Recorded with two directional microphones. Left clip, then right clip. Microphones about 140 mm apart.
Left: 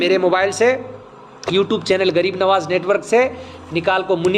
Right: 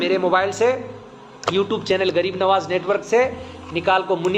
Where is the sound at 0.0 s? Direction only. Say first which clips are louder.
Left 3 dB; 65° left (ahead or behind).